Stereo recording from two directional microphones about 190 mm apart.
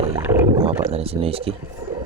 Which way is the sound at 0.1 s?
15° right (ahead or behind).